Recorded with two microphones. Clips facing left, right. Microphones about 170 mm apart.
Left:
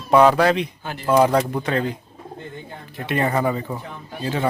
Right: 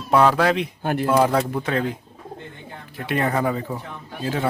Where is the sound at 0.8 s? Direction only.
55° right (ahead or behind).